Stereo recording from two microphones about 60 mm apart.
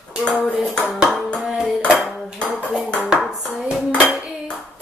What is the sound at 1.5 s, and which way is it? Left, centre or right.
Dishes, centre.